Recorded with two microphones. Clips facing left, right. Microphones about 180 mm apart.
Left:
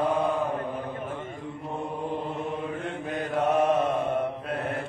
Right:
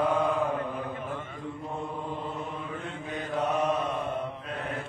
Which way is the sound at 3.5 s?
45° left (ahead or behind).